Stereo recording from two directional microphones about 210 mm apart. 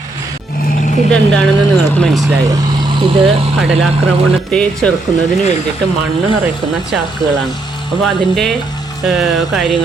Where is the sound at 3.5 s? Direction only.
Centre (ahead or behind).